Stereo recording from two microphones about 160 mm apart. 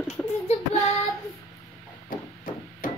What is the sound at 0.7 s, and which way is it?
Child singing, 20° left (ahead or behind).